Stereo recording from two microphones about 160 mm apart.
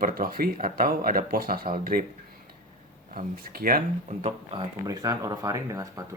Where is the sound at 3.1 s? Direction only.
65° right (ahead or behind).